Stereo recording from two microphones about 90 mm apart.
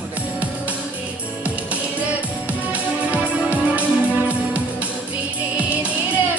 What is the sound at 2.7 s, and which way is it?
Music, 15° right (ahead or behind).